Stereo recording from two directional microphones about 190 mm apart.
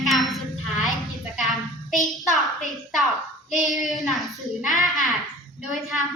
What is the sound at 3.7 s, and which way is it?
Child singing, centre (ahead or behind).